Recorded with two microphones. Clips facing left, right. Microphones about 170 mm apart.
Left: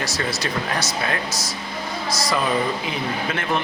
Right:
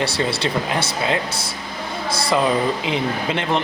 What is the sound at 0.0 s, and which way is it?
Speech, 30° right (ahead or behind).